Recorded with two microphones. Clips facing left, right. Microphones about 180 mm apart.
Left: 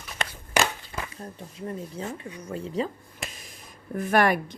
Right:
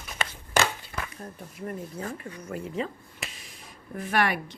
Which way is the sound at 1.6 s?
25° left (ahead or behind).